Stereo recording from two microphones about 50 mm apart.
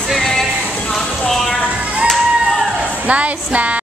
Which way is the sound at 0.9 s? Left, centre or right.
Centre.